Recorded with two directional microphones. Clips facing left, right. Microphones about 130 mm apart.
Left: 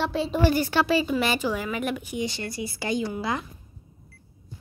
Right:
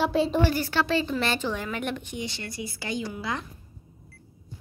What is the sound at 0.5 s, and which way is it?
A woman's voice, 15° left (ahead or behind).